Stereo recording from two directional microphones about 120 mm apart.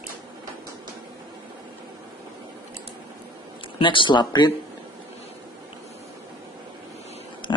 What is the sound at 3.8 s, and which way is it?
Speech, 45° left (ahead or behind).